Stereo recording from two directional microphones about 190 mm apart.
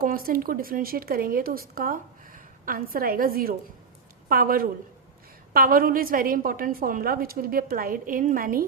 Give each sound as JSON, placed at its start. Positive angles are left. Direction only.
{"t": 0.0, "sound": "speech", "side_deg": -50}